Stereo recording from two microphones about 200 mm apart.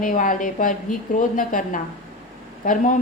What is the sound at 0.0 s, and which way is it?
A woman's voice, 40° left (ahead or behind).